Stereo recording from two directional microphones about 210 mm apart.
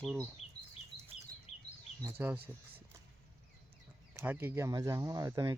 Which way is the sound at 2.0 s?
10° right (ahead or behind).